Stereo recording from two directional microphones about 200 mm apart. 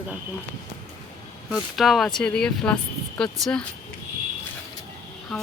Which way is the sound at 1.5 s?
Centre (ahead or behind).